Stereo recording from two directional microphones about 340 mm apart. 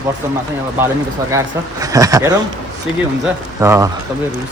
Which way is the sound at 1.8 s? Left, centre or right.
Centre.